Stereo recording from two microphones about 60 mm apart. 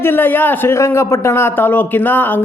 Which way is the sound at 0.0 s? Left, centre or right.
Left.